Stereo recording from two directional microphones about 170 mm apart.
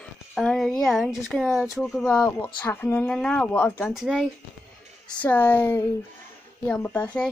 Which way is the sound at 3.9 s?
5° right (ahead or behind).